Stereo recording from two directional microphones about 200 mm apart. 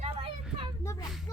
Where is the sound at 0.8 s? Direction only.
15° left (ahead or behind).